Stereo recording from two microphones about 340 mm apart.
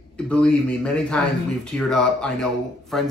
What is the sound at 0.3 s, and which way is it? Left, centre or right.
Speech, centre.